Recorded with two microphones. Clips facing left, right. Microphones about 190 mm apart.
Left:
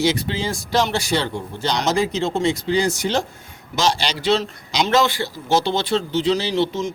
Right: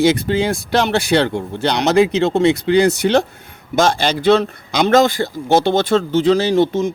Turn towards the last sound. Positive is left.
turn(degrees=-50)  # may be behind; listen again after turning